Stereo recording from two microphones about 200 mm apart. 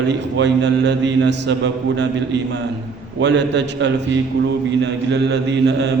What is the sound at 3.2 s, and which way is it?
Speech, 60° right (ahead or behind).